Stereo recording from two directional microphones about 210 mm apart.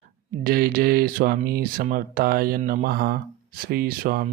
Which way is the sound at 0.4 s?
45° right (ahead or behind).